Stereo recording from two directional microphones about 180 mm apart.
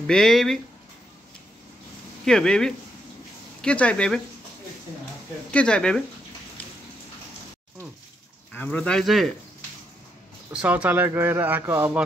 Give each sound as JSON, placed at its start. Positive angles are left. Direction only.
{"t": 0.0, "sound": "speech", "side_deg": 0}
{"t": 2.2, "sound": "speech", "side_deg": 5}
{"t": 5.5, "sound": "speech", "side_deg": 5}
{"t": 8.5, "sound": "speech", "side_deg": 10}
{"t": 10.5, "sound": "speech", "side_deg": -5}